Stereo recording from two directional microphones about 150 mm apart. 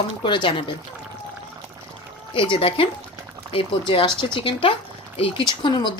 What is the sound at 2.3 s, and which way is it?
A woman's voice, 35° left (ahead or behind).